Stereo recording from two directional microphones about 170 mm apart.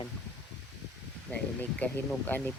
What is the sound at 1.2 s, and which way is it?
Speech, 5° left (ahead or behind).